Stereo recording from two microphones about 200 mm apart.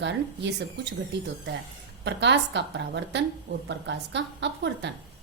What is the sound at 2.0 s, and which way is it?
A woman's voice, 60° right (ahead or behind).